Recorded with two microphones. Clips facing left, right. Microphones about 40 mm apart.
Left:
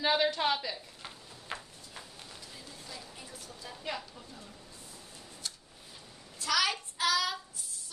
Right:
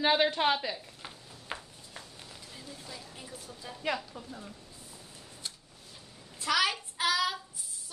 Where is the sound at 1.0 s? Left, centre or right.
Centre.